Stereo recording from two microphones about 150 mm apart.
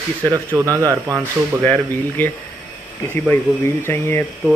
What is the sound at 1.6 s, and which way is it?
Speech, 10° left (ahead or behind).